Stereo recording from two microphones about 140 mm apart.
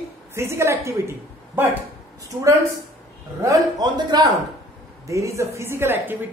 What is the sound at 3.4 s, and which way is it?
A woman's voice, 30° right (ahead or behind).